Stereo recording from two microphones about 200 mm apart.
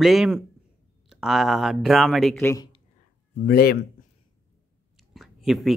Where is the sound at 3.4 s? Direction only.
50° left (ahead or behind).